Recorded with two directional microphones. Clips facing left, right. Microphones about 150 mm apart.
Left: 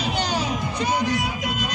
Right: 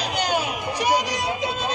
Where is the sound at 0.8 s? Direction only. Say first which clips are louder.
Right 1 dB; 15° right (ahead or behind).